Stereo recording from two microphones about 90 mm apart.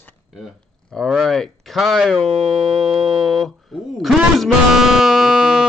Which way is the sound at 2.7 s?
90° right.